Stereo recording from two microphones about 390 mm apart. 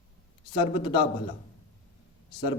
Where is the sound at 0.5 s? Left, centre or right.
Centre.